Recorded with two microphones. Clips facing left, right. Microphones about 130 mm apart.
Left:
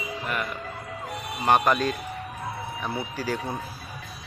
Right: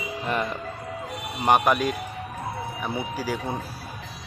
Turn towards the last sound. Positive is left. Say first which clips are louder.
# right 1 dB
turn(degrees=-10)  # may be behind; listen again after turning